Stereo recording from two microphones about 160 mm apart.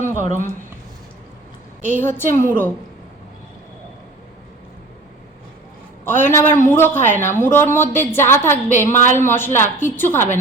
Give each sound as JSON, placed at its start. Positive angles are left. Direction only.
{"t": 0.0, "sound": "speech", "side_deg": -55}
{"t": 1.9, "sound": "a woman's voice", "side_deg": 15}
{"t": 6.1, "sound": "a woman's voice", "side_deg": 15}